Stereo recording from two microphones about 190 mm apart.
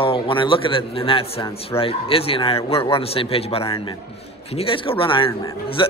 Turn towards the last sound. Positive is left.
turn(degrees=25)  # may be behind; listen again after turning